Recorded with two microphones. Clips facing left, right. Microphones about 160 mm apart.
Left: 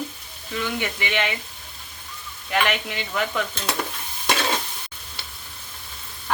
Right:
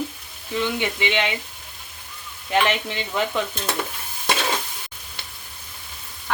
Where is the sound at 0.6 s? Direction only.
20° right (ahead or behind).